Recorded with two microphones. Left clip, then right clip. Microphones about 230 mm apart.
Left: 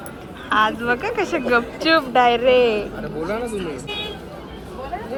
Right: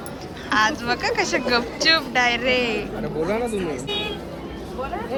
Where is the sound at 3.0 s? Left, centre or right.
Right.